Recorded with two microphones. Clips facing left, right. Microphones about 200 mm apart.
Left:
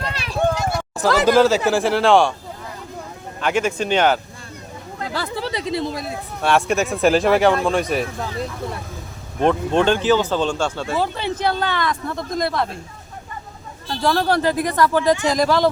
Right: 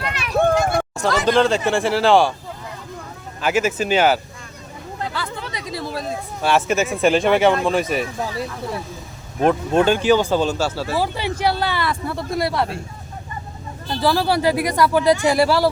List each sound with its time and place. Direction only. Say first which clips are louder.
0.1 s a sound: right 1 dB; 30° left (ahead or behind)
0.3 s a sound: right 4 dB; 50° right (ahead or behind)
1.2 s speech: left 2 dB; 5° left (ahead or behind)
3.4 s speech: right 1 dB; 5° right (ahead or behind)
5.1 s speech: left 4 dB; 35° left (ahead or behind); by 6.1 s 15° left (ahead or behind)
6.4 s speech: even; centre (ahead or behind)
9.4 s speech: right 1 dB; 5° right (ahead or behind)
13.9 s speech: even; 5° right (ahead or behind)